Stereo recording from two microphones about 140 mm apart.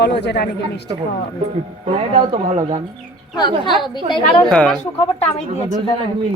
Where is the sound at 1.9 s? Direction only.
45° right (ahead or behind).